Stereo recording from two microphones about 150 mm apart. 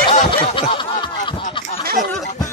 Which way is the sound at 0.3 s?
35° left (ahead or behind).